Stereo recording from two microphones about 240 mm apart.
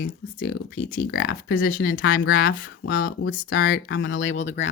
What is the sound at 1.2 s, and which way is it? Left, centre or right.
Speech, left.